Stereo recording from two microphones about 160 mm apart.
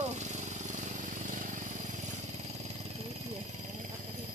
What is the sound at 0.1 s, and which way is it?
Vehicle, 45° right (ahead or behind).